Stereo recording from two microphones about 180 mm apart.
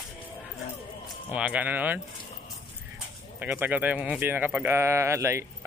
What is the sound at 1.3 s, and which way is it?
Speech, 5° right (ahead or behind).